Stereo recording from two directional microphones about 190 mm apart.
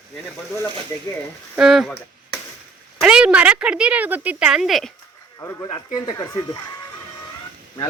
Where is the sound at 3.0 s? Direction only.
5° right (ahead or behind).